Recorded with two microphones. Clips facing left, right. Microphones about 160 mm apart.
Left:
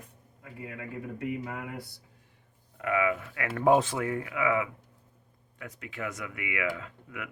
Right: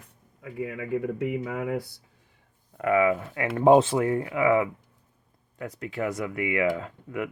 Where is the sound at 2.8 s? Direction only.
40° right (ahead or behind).